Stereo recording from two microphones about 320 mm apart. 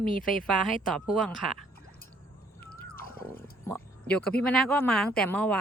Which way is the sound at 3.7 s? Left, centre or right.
Centre.